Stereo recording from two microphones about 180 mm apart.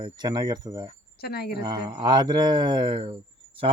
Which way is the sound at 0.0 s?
25° right (ahead or behind).